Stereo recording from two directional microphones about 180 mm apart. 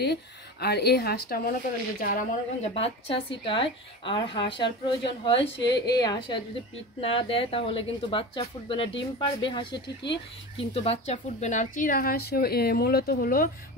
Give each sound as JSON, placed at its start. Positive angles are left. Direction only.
{"t": 0.0, "sound": "speech", "side_deg": 65}
{"t": 2.6, "sound": "a woman's voice", "side_deg": 35}
{"t": 9.7, "sound": "speech", "side_deg": 70}
{"t": 10.6, "sound": "speech", "side_deg": 35}